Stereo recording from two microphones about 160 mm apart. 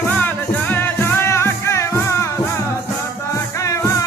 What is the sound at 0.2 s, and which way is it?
Music, 10° left (ahead or behind).